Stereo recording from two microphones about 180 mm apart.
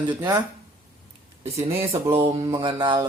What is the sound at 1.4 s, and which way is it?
Speech, 35° right (ahead or behind).